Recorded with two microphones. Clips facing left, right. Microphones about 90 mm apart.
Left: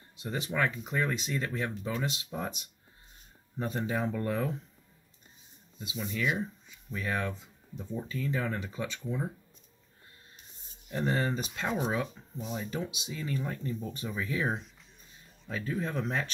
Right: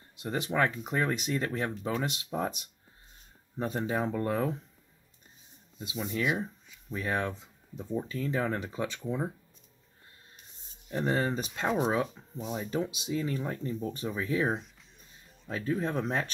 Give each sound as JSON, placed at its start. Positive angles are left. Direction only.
{"t": 0.2, "sound": "speech", "side_deg": -45}
{"t": 3.5, "sound": "speech", "side_deg": -25}
{"t": 5.8, "sound": "speech", "side_deg": -35}
{"t": 10.9, "sound": "speech", "side_deg": -25}
{"t": 12.9, "sound": "speech", "side_deg": -40}
{"t": 14.4, "sound": "speech", "side_deg": 0}
{"t": 15.4, "sound": "speech", "side_deg": -35}